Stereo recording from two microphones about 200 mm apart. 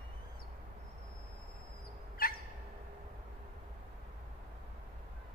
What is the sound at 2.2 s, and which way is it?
Fowl, 45° left (ahead or behind).